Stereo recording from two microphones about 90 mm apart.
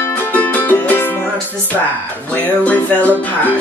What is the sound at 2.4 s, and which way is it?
Music, 20° left (ahead or behind).